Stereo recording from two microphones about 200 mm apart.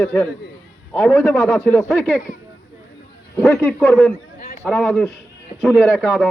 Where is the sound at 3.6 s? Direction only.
10° left (ahead or behind).